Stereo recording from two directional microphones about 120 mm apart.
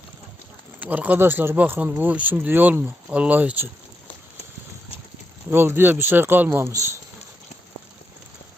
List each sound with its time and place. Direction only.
0.8 s speech: 15° right (ahead or behind)
5.5 s speech: 20° right (ahead or behind)